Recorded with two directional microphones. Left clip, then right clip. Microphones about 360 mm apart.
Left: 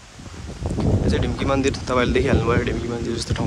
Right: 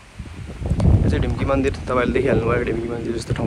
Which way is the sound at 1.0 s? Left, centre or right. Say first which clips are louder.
Left 1 dB; centre.